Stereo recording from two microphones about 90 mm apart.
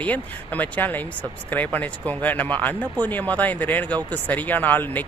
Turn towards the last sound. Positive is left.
turn(degrees=20)  # may be behind; listen again after turning